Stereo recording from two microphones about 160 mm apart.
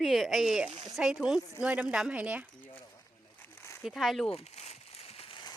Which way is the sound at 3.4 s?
15° left (ahead or behind).